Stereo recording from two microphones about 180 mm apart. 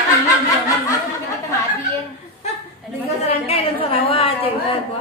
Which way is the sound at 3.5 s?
30° left (ahead or behind).